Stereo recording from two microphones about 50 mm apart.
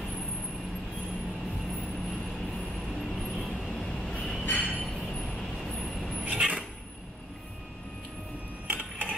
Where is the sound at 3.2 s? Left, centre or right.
Centre.